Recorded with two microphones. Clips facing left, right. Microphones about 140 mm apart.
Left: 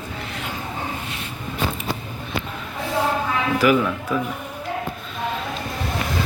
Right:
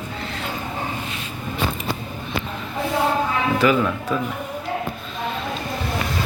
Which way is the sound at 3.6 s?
10° left (ahead or behind).